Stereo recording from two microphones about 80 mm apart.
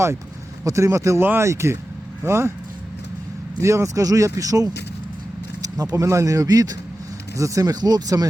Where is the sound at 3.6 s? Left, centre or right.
Right.